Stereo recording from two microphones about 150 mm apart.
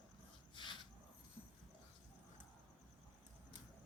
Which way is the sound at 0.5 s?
30° left (ahead or behind).